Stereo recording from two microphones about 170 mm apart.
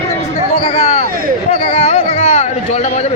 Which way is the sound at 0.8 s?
40° left (ahead or behind).